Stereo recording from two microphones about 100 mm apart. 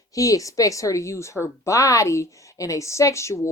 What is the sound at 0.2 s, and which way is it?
Speech, 35° left (ahead or behind).